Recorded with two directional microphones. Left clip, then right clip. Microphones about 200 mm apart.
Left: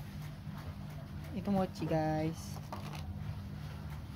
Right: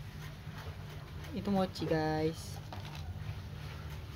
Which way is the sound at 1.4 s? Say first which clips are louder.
Right 1 dB; 20° right (ahead or behind).